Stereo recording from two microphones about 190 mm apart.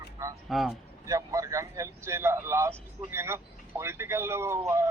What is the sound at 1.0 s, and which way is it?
Speech, 15° right (ahead or behind).